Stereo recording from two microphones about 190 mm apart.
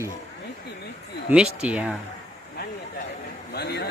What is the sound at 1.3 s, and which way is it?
Speech, 5° right (ahead or behind).